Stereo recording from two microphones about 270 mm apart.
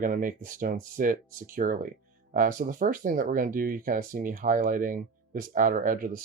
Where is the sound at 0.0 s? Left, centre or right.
Right.